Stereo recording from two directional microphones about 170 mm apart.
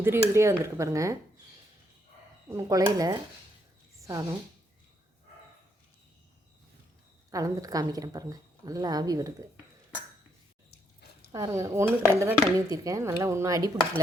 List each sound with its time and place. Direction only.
0.0 s speech: 15° right (ahead or behind)
2.5 s a woman's voice: 20° right (ahead or behind)
7.3 s a woman's voice: 20° right (ahead or behind)
10.7 s a sound: 70° left (ahead or behind)
11.3 s a woman's voice: 20° right (ahead or behind)